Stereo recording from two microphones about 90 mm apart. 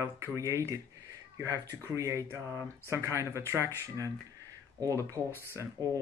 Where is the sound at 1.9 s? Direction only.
35° right (ahead or behind).